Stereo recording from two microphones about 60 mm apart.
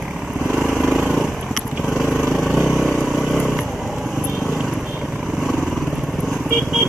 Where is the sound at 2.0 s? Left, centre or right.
Centre.